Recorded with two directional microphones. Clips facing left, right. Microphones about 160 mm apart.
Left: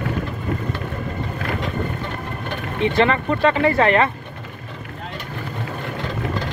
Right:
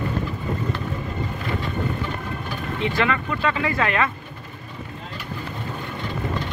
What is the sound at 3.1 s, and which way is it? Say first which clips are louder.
Speech: left 5 dB; 35° left (ahead or behind).